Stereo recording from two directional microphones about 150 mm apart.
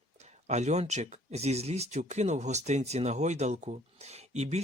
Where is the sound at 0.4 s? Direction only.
50° right (ahead or behind).